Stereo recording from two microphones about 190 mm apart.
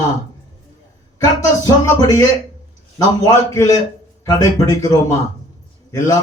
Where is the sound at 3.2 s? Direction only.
15° left (ahead or behind).